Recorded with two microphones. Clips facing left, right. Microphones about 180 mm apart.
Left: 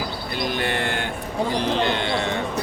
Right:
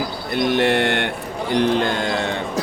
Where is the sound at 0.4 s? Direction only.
70° right (ahead or behind).